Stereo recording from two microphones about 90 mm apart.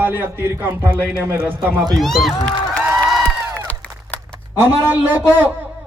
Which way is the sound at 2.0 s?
Centre (ahead or behind).